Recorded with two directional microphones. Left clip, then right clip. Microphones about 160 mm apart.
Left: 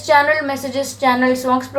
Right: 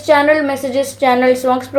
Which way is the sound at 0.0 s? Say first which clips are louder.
Right 2 dB; 20° right (ahead or behind).